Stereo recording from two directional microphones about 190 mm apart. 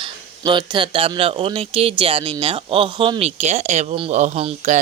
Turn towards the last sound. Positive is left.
turn(degrees=-35)  # may be behind; listen again after turning